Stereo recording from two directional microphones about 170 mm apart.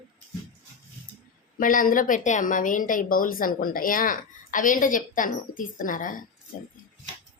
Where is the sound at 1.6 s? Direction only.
55° left (ahead or behind).